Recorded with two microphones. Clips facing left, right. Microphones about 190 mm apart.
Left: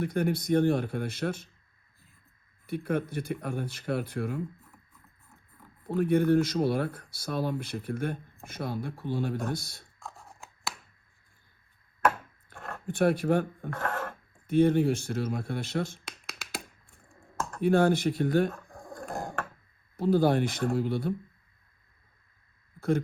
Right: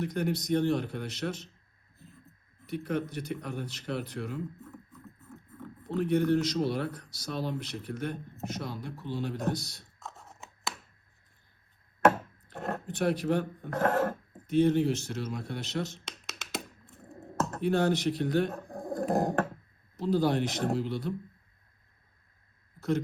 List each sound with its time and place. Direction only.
0.0 s speech: 55° left (ahead or behind)
2.6 s speech: 55° left (ahead or behind)
6.0 s speech: 55° left (ahead or behind)
10.0 s scissors: centre (ahead or behind)
12.5 s a sound: 40° right (ahead or behind)
12.9 s speech: 55° left (ahead or behind)
13.7 s a sound: 40° right (ahead or behind)
14.4 s speech: 55° left (ahead or behind)
16.0 s finger snapping: centre (ahead or behind)
16.8 s a sound: 20° right (ahead or behind)
17.6 s speech: 55° left (ahead or behind)
18.5 s pigeon: 35° right (ahead or behind)
19.1 s dog: 35° right (ahead or behind)
20.0 s speech: 55° left (ahead or behind)